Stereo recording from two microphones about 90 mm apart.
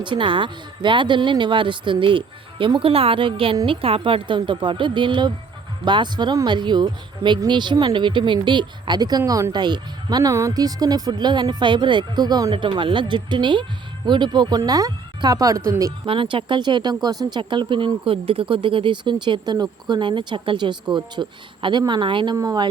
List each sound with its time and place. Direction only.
0.0 s speech: 65° right (ahead or behind); by 9.6 s 40° right (ahead or behind)
9.6 s speech: 55° right (ahead or behind)
12.5 s speech: 65° right (ahead or behind); by 15.7 s 40° right (ahead or behind)
16.0 s speech: 75° right (ahead or behind)
22.4 s speech: 45° right (ahead or behind)